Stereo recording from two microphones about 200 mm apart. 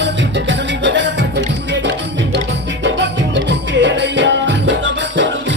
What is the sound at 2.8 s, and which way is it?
Music, 60° right (ahead or behind).